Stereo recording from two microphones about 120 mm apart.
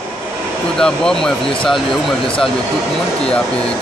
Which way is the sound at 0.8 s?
5° left (ahead or behind).